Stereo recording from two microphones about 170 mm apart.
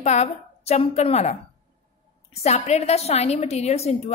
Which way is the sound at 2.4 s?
40° left (ahead or behind).